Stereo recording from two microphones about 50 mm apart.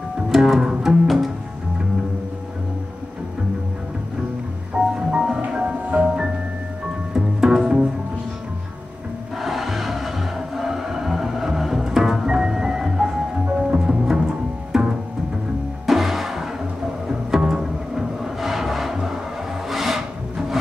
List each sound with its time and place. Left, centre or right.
0.3 s music: centre
4.9 s music: centre
7.2 s music: centre
9.4 s music: centre
19.7 s wood: centre